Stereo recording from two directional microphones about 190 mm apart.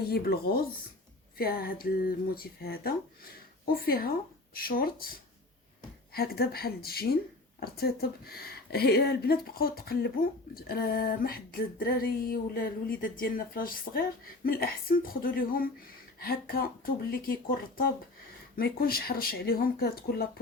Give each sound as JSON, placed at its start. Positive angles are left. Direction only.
{"t": 0.1, "sound": "a woman's voice", "side_deg": 55}
{"t": 6.1, "sound": "a woman's voice", "side_deg": 55}